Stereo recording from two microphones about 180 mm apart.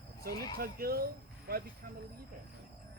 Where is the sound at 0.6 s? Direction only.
55° right (ahead or behind).